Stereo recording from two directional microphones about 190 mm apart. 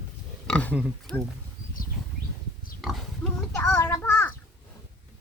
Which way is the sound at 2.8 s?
Centre (ahead or behind).